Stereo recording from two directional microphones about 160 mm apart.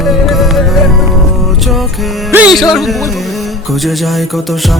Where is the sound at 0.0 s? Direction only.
Centre (ahead or behind).